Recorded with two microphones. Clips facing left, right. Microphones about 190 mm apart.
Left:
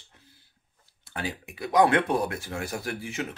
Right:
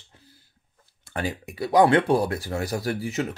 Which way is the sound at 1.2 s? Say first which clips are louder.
Right 5 dB; 45° right (ahead or behind).